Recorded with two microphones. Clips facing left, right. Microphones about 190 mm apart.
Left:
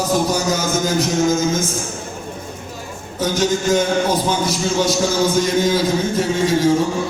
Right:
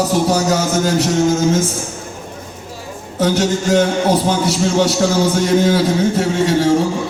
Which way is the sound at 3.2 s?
70° right (ahead or behind).